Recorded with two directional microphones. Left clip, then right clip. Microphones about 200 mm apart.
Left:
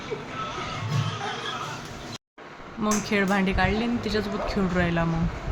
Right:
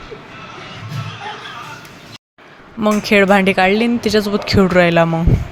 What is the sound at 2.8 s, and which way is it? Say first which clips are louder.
Speech: right 12 dB; 45° right (ahead or behind).